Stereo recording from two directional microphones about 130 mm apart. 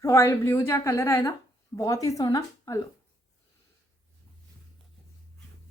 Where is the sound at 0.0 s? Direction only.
20° left (ahead or behind).